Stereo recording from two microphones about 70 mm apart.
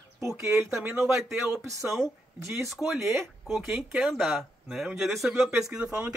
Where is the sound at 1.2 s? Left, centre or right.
Centre.